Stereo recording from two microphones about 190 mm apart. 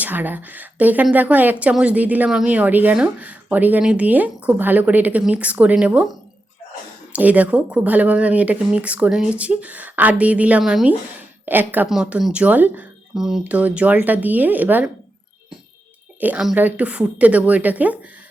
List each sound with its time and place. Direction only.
0.0 s speech: 10° right (ahead or behind)
7.1 s speech: 10° right (ahead or behind)
16.2 s speech: 5° right (ahead or behind)